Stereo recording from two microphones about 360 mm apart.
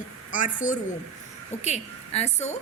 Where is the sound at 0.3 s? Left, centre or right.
Left.